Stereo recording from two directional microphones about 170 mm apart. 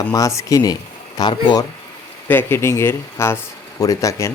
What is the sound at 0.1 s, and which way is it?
Speech, 20° left (ahead or behind).